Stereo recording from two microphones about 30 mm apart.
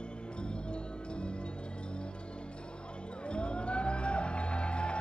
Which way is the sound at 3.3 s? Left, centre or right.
Left.